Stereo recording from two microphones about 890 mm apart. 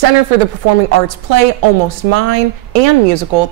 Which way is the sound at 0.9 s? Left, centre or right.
Right.